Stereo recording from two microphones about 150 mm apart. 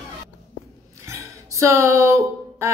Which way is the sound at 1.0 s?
20° right (ahead or behind).